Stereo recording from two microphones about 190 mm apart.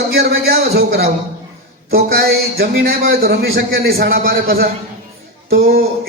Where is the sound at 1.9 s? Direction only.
55° right (ahead or behind).